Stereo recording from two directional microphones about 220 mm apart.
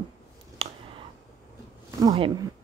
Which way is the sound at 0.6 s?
25° right (ahead or behind).